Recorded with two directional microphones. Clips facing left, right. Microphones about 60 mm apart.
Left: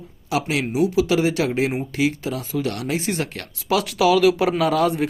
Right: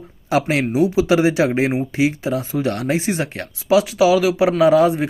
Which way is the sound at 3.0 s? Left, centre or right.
Centre.